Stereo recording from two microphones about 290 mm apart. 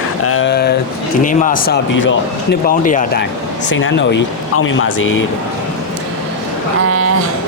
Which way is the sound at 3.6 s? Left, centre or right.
Left.